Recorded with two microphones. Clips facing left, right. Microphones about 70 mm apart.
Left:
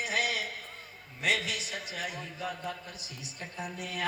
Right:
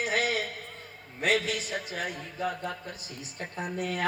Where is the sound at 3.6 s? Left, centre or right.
Right.